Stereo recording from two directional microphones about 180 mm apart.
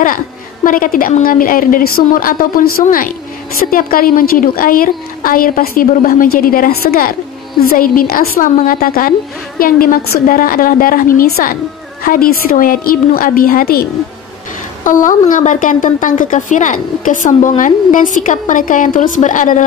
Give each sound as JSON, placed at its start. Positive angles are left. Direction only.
{"t": 0.7, "sound": "a woman's voice", "side_deg": 50}